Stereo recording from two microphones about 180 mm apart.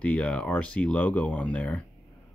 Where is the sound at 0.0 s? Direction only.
10° left (ahead or behind).